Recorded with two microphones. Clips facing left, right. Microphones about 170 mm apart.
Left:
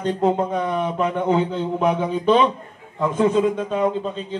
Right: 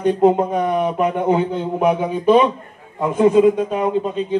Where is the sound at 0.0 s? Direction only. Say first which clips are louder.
Right 5 dB; 15° right (ahead or behind).